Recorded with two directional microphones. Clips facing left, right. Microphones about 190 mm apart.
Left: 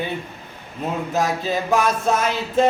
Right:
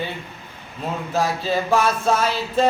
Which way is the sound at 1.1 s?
20° left (ahead or behind).